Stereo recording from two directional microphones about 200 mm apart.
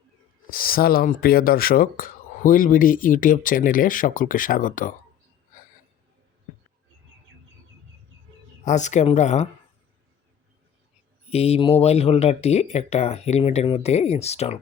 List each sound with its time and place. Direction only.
0.4 s speech: 45° left (ahead or behind)
8.6 s speech: 35° left (ahead or behind)
11.3 s speech: 30° left (ahead or behind)